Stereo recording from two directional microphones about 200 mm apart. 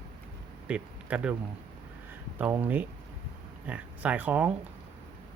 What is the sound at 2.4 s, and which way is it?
Speech, 10° right (ahead or behind).